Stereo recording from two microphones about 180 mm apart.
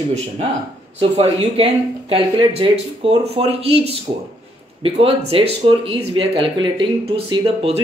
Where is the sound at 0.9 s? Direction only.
35° right (ahead or behind).